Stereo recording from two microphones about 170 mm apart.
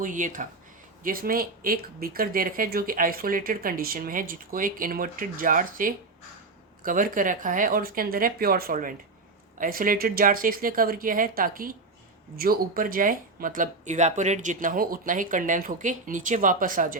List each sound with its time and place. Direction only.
0.0 s speech: 50° right (ahead or behind)